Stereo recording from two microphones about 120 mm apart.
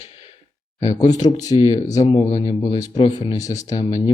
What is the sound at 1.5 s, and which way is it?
Speech, 50° left (ahead or behind).